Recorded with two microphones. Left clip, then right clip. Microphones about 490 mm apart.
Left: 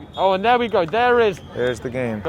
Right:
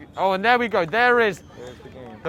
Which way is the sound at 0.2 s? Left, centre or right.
Right.